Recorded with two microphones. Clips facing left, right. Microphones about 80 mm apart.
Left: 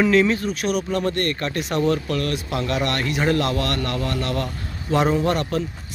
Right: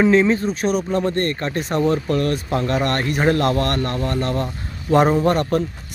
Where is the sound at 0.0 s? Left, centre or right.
Right.